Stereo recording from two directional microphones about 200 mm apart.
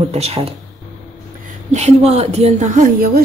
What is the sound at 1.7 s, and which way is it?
Speech, 35° right (ahead or behind).